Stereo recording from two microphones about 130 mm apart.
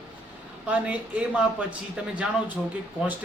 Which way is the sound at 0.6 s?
10° right (ahead or behind).